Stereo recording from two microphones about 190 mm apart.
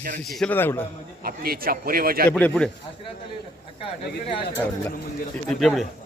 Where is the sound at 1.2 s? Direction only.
50° right (ahead or behind).